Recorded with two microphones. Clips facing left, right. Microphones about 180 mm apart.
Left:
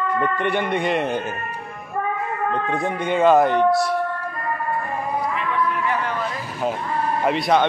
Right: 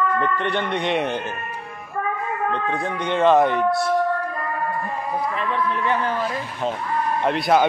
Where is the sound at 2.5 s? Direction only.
15° left (ahead or behind).